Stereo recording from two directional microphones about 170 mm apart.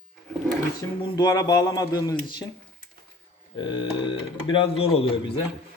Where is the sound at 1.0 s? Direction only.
25° left (ahead or behind).